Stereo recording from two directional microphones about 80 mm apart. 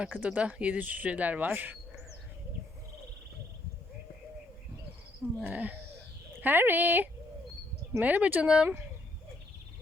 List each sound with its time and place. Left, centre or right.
0.0 s speech: centre
5.4 s speech: centre